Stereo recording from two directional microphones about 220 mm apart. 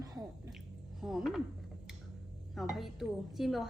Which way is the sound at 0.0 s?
15° right (ahead or behind).